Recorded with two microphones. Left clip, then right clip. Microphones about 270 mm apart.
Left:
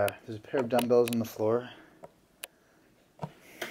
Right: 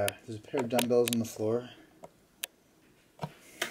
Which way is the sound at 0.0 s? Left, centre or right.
Centre.